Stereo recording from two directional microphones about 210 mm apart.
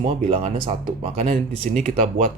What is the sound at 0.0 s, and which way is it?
Speech, 30° right (ahead or behind).